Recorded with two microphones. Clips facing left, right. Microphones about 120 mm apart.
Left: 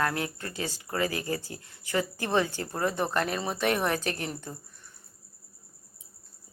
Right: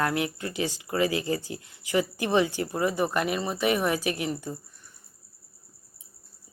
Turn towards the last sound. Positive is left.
turn(degrees=-5)  # may be behind; listen again after turning